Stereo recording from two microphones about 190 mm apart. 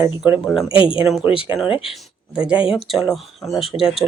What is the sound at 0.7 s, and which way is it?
Speech, 25° left (ahead or behind).